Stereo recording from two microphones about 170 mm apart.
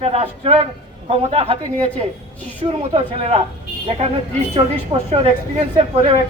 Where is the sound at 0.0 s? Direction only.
40° right (ahead or behind).